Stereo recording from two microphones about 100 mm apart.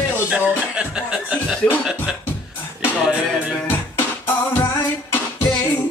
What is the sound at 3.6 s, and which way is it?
Music, 20° left (ahead or behind).